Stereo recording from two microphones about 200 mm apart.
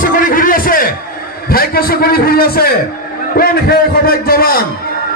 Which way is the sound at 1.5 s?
50° left (ahead or behind).